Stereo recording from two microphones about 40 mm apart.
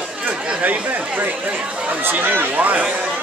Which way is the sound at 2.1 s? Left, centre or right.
Right.